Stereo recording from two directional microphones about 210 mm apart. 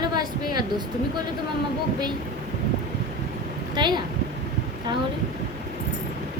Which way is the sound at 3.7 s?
20° right (ahead or behind).